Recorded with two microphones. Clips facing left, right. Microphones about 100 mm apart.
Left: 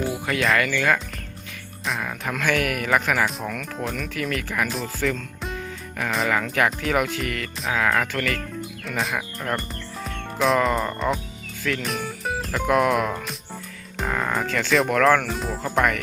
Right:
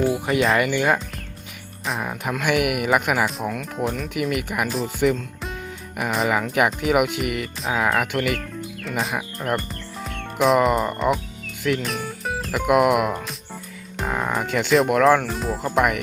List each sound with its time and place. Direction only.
0.1 s speech: 15° right (ahead or behind)
2.0 s speech: 20° right (ahead or behind)
8.8 s speech: centre (ahead or behind)
9.1 s speech: 15° right (ahead or behind)
10.4 s music: centre (ahead or behind)
10.7 s speech: 10° right (ahead or behind)
11.8 s music: centre (ahead or behind)
12.5 s speech: 10° right (ahead or behind)
13.9 s music: 5° right (ahead or behind)
14.8 s speech: 10° right (ahead or behind)